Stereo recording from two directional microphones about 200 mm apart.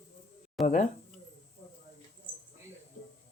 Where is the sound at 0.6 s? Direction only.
35° left (ahead or behind).